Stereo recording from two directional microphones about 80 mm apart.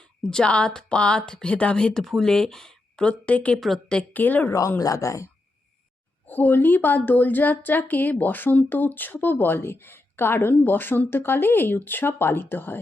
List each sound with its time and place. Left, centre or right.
0.2 s speech: centre
4.1 s speech: left
4.8 s speech: left
6.2 s speech: left